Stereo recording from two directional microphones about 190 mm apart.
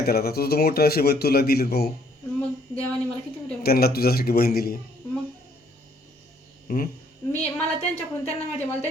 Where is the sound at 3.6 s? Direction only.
55° left (ahead or behind).